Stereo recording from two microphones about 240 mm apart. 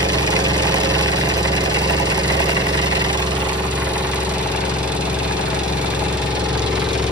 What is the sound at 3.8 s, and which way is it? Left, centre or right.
Engine, centre.